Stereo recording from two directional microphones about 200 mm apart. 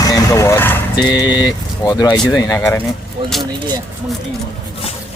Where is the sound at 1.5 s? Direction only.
20° left (ahead or behind).